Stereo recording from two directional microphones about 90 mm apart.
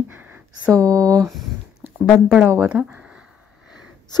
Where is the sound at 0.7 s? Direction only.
40° right (ahead or behind).